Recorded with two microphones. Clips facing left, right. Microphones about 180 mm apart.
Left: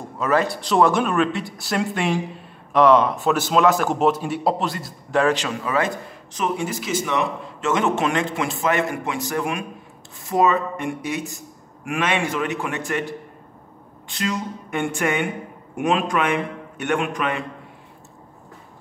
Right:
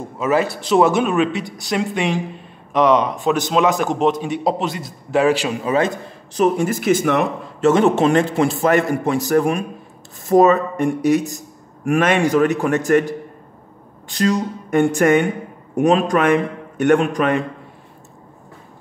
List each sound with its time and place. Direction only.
0.2 s a man's voice: 5° right (ahead or behind)
5.6 s a man's voice: 25° right (ahead or behind)
6.3 s speech: 40° right (ahead or behind)
7.6 s speech: 35° right (ahead or behind)